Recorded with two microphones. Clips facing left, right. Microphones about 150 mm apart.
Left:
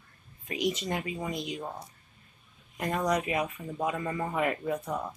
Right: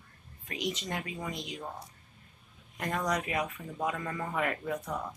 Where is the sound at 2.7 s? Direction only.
10° left (ahead or behind).